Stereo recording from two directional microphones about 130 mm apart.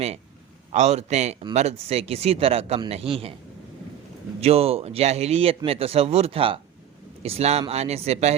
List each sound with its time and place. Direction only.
0.7 s a man's voice: 60° right (ahead or behind)
4.4 s a man's voice: 50° right (ahead or behind)